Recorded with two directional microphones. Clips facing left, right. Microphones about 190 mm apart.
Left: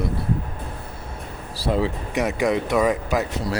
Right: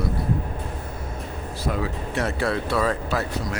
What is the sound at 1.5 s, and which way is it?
Speech, 30° left (ahead or behind).